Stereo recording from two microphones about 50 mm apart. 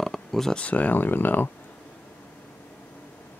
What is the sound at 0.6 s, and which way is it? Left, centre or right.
Speech, left.